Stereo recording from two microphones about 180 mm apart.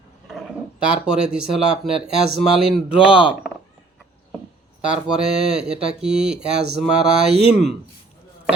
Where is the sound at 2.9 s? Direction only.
30° left (ahead or behind).